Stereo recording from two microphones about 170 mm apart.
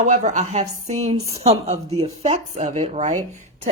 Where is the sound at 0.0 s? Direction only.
45° right (ahead or behind).